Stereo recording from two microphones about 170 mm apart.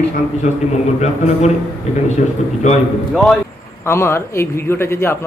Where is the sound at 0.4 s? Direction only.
45° left (ahead or behind).